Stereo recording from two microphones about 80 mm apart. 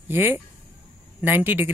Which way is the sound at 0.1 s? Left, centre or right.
Right.